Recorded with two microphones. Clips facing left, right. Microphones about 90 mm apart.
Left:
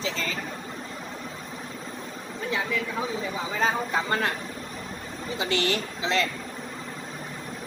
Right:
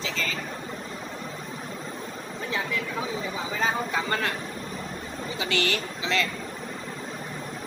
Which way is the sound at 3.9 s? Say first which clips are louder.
Left 1 dB; 20° left (ahead or behind).